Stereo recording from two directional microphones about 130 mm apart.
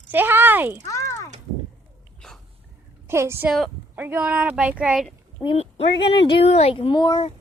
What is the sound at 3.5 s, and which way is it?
Speech, centre (ahead or behind).